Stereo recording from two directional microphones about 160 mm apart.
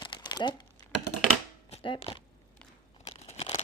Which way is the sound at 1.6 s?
35° left (ahead or behind).